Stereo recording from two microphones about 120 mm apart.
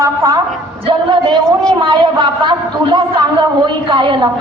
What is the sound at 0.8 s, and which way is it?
Speech, 45° right (ahead or behind).